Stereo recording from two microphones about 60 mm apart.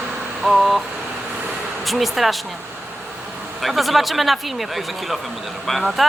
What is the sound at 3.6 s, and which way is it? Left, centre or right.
Speech, centre.